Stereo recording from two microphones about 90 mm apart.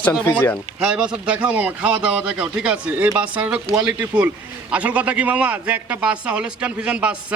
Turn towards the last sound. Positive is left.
turn(degrees=-10)  # may be behind; listen again after turning